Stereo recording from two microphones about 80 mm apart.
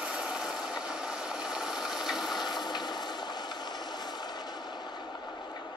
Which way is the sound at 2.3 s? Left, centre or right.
Left.